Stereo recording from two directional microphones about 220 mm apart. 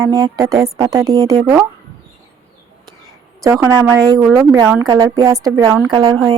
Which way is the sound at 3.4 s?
15° right (ahead or behind).